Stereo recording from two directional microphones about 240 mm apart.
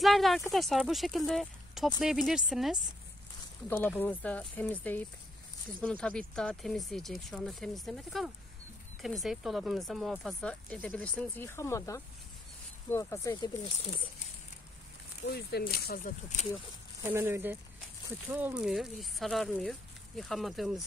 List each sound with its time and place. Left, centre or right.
0.0 s speech: centre
15.2 s speech: left
17.1 s speech: centre